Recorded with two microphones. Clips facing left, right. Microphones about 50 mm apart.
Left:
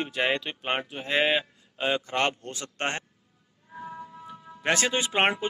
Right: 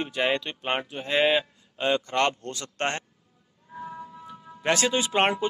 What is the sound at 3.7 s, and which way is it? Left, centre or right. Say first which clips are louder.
Music: right 1 dB; centre.